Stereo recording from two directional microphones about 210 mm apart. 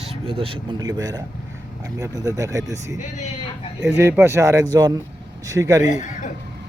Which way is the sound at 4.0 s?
10° right (ahead or behind).